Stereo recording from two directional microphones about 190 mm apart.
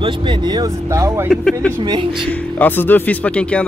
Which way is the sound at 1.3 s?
5° left (ahead or behind).